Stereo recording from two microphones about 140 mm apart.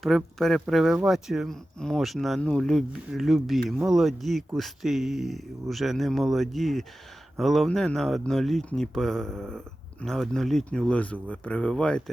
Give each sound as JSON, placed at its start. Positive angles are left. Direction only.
{"t": 0.0, "sound": "speech", "side_deg": 0}